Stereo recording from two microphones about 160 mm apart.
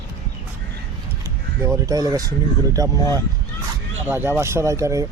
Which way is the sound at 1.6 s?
20° right (ahead or behind).